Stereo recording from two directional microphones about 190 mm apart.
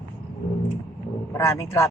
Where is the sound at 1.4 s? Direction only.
15° left (ahead or behind).